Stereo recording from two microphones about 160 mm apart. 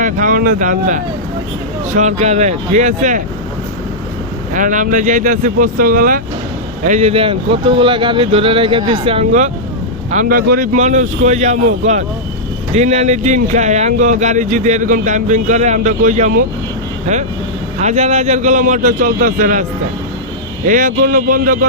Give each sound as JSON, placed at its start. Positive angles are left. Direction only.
{"t": 0.0, "sound": "speech", "side_deg": -55}
{"t": 4.5, "sound": "speech", "side_deg": -55}
{"t": 6.8, "sound": "speech", "side_deg": -45}
{"t": 10.1, "sound": "speech", "side_deg": -55}
{"t": 10.8, "sound": "speech", "side_deg": -50}
{"t": 20.7, "sound": "speech", "side_deg": -55}